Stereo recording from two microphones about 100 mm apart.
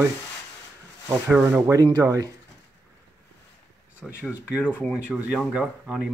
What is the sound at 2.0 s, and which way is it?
Speech, 40° right (ahead or behind).